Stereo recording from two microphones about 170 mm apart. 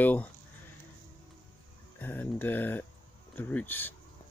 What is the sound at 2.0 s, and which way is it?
Speech, 10° left (ahead or behind).